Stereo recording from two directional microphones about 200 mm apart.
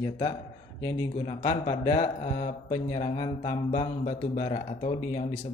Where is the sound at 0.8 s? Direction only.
20° left (ahead or behind).